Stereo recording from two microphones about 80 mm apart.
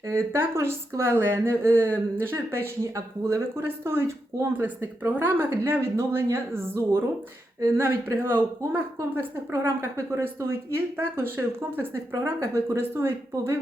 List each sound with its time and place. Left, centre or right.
0.1 s a woman's voice: right